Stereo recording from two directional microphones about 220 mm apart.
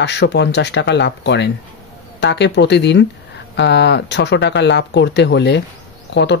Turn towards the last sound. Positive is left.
turn(degrees=50)  # may be behind; listen again after turning